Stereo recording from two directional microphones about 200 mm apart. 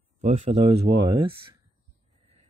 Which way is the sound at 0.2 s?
30° right (ahead or behind).